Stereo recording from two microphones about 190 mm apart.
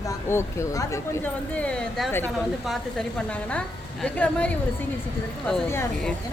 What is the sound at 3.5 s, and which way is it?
A woman's voice, 5° left (ahead or behind).